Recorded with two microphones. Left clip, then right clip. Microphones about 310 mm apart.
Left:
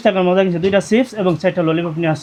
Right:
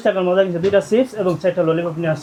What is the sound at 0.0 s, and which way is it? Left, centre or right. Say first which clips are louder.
Speech: left 2 dB; left.